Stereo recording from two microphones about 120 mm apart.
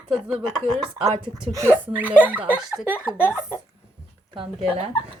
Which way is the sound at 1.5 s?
25° right (ahead or behind).